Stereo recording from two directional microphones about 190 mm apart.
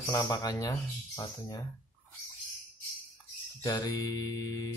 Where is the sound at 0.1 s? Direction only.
20° left (ahead or behind).